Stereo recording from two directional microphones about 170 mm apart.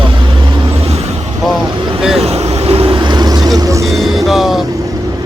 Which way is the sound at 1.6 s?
25° right (ahead or behind).